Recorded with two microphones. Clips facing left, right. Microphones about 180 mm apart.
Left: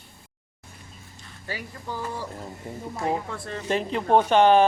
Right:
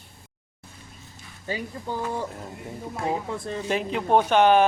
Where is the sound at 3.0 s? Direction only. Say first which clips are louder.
Even; 20° right (ahead or behind).